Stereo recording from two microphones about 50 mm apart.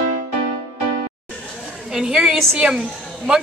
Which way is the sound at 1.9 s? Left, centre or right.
Centre.